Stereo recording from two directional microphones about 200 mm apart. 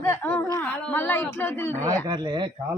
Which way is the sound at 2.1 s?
25° right (ahead or behind).